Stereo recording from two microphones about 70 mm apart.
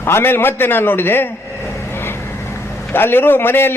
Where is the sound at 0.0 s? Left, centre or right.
Left.